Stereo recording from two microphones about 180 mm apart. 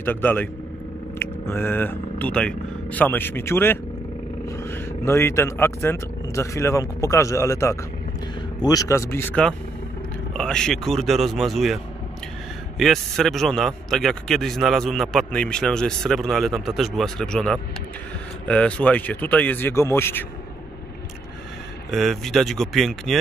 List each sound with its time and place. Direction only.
0.0 s a man's voice: 10° left (ahead or behind)
21.9 s a man's voice: centre (ahead or behind)